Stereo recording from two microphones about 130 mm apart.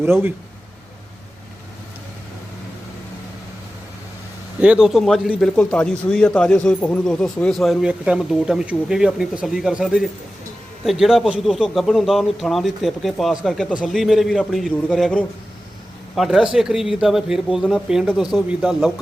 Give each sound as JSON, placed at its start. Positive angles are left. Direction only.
{"t": 0.0, "sound": "speech", "side_deg": -15}
{"t": 4.6, "sound": "speech", "side_deg": -5}